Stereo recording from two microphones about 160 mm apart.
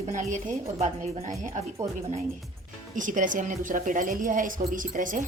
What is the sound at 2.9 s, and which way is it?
A woman's voice, 55° right (ahead or behind).